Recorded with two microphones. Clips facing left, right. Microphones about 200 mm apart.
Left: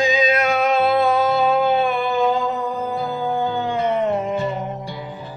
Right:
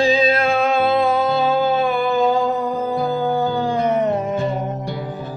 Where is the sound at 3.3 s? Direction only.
40° right (ahead or behind).